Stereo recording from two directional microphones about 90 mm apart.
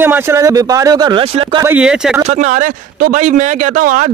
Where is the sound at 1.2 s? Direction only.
90° right.